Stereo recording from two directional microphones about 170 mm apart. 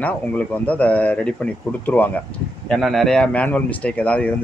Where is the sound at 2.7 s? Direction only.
Centre (ahead or behind).